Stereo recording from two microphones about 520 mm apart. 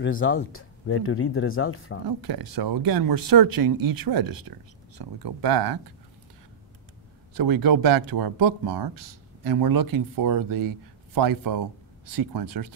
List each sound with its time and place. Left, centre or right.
0.0 s speech: left
2.0 s speech: right
7.3 s speech: right